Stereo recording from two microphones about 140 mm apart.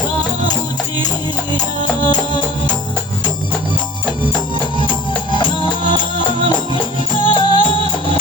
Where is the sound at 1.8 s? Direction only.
30° left (ahead or behind).